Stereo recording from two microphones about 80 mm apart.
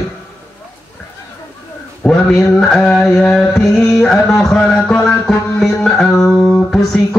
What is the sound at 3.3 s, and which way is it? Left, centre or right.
Music, centre.